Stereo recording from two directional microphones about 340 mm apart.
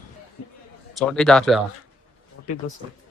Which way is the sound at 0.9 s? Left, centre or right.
Centre.